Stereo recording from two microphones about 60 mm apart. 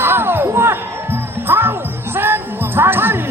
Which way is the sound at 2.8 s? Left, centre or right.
Right.